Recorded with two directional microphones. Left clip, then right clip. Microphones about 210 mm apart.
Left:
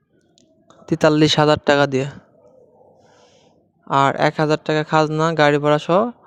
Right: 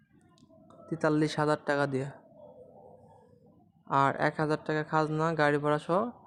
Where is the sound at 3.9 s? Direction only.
40° left (ahead or behind).